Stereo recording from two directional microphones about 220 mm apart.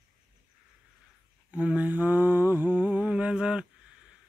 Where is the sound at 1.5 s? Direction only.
5° right (ahead or behind).